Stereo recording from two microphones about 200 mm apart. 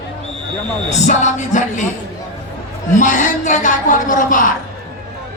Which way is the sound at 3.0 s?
40° left (ahead or behind).